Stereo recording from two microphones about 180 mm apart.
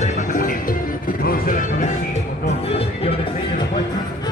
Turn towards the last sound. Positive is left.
turn(degrees=35)  # may be behind; listen again after turning